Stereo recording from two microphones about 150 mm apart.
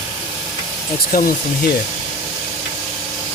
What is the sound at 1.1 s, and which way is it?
Speech, 80° left.